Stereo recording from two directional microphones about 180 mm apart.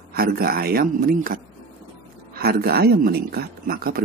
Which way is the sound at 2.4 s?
60° right (ahead or behind).